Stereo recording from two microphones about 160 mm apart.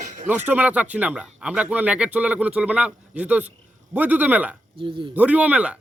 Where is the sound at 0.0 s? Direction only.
50° right (ahead or behind).